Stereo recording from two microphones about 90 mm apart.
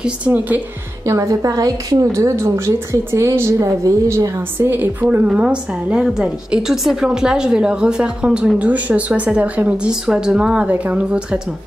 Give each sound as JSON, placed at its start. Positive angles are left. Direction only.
{"t": 0.0, "sound": "a woman's voice", "side_deg": -15}
{"t": 1.0, "sound": "a woman's voice", "side_deg": -35}
{"t": 4.6, "sound": "a woman's voice", "side_deg": -25}